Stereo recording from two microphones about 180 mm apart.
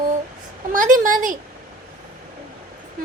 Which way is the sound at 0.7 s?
45° right (ahead or behind).